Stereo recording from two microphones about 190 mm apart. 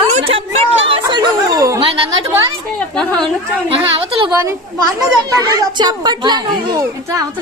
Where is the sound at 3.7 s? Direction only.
30° right (ahead or behind).